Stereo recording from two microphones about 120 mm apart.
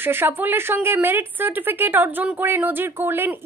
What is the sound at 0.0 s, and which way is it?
A woman's voice, 20° right (ahead or behind).